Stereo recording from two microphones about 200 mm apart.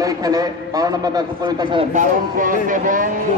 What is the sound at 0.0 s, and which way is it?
A man's voice, 20° right (ahead or behind).